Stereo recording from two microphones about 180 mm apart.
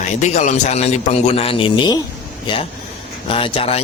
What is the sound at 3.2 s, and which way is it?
Mantra, 30° left (ahead or behind).